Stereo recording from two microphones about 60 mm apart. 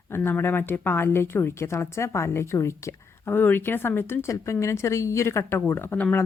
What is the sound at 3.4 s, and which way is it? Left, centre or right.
Speech, left.